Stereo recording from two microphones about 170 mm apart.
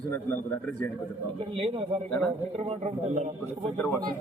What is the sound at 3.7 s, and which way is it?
Speech, 15° left (ahead or behind).